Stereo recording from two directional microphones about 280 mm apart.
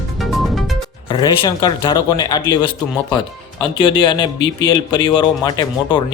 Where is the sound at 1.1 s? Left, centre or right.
Centre.